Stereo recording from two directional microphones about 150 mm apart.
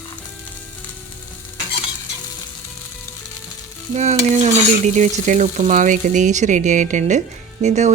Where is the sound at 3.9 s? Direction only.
50° right (ahead or behind).